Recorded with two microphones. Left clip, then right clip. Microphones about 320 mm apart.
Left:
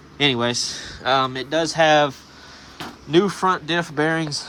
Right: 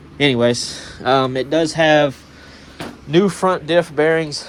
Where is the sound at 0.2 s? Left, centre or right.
Centre.